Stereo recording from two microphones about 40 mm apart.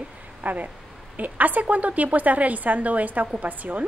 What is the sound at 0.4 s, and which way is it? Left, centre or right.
A woman's voice, right.